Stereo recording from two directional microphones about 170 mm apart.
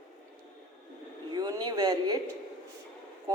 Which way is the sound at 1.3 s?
25° right (ahead or behind).